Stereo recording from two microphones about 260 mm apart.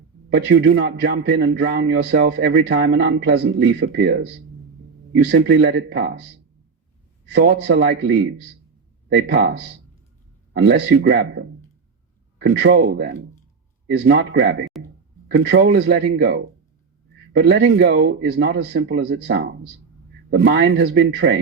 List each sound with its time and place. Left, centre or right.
0.3 s a man's voice: right
7.3 s a man's voice: right
14.7 s a sound: centre
15.4 s a man's voice: right